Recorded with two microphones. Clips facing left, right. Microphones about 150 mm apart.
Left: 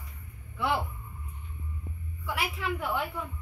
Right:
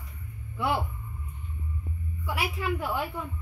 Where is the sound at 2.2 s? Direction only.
10° right (ahead or behind).